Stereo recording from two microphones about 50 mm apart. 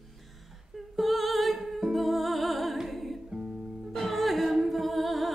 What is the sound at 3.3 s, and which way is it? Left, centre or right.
Music, centre.